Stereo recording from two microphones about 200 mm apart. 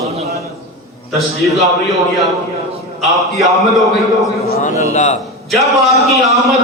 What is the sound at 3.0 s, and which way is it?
Speech, centre (ahead or behind).